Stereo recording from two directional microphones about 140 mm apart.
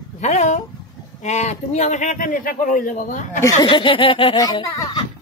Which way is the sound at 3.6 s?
35° left (ahead or behind).